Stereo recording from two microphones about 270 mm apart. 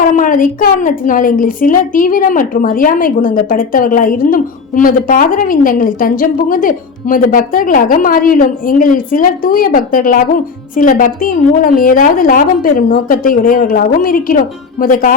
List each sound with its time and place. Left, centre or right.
0.0 s a woman's voice: left